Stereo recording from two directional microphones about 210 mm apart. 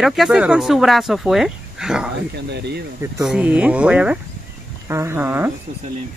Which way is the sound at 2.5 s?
50° right (ahead or behind).